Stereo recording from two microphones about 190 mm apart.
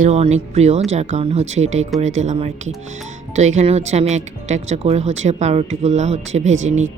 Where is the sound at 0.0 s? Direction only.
35° right (ahead or behind).